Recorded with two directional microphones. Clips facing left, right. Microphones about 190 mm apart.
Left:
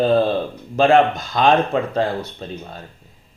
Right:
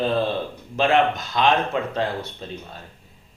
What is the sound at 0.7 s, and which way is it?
Speech, 40° left (ahead or behind).